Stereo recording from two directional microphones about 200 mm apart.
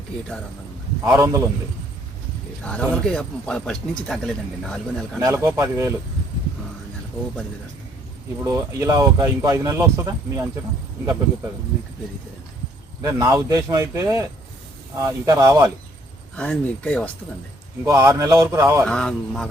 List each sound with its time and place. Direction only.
1.0 s speech: 10° right (ahead or behind)
2.6 s speech: 5° left (ahead or behind)
5.2 s speech: 15° right (ahead or behind)
8.4 s speech: 15° right (ahead or behind)
13.0 s speech: 15° right (ahead or behind)
16.3 s speech: 5° left (ahead or behind)
17.8 s speech: 15° right (ahead or behind)
18.9 s speech: 5° left (ahead or behind)